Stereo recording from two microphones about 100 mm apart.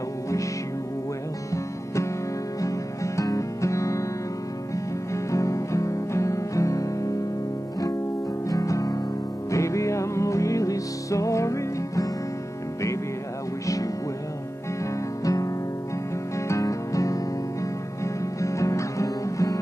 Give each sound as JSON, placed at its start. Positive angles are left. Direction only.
{"t": 2.6, "sound": "music", "side_deg": 35}
{"t": 5.1, "sound": "music", "side_deg": 30}
{"t": 8.5, "sound": "music", "side_deg": 35}
{"t": 15.2, "sound": "music", "side_deg": 35}